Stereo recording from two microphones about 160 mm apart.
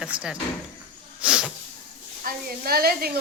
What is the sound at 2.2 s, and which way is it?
Speech, 70° right (ahead or behind).